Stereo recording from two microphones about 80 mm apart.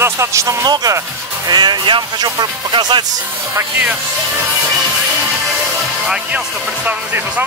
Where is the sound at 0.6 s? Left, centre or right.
Right.